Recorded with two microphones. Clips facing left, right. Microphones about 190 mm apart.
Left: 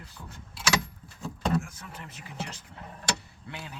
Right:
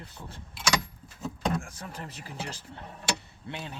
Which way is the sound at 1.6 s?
35° right (ahead or behind).